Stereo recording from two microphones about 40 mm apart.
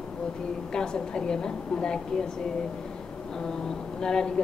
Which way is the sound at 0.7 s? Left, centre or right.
Centre.